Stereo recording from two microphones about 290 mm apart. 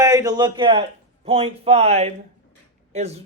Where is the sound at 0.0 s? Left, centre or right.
Centre.